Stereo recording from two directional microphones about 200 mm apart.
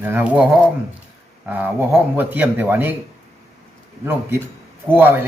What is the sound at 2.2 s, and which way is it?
Speech, 10° right (ahead or behind).